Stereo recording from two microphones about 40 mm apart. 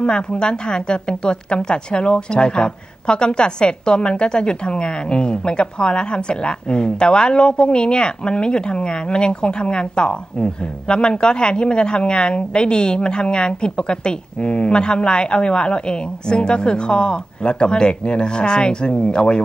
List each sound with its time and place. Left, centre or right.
0.0 s a woman's voice: left